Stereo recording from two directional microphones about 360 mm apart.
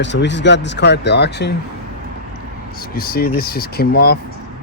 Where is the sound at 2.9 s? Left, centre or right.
Left.